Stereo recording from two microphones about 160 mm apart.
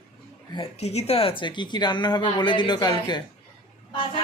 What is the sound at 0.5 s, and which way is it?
Speech, 40° left (ahead or behind).